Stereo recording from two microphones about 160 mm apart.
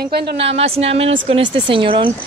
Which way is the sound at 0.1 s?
90° right.